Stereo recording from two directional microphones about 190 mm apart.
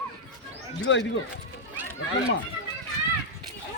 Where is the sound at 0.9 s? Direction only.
70° left (ahead or behind).